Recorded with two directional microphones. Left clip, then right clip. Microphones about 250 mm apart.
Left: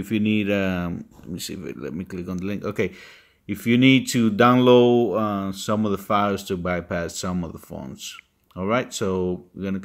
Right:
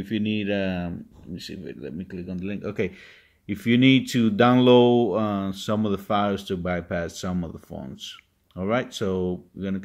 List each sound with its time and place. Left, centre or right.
0.0 s speech: centre
3.4 s speech: centre